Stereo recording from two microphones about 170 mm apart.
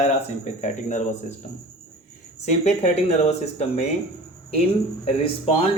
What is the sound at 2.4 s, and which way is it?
Speech, 40° left (ahead or behind).